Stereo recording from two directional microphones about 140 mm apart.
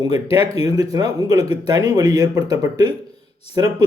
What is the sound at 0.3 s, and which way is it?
Speech, 45° left (ahead or behind).